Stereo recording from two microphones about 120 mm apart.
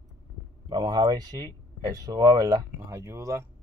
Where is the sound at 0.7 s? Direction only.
35° right (ahead or behind).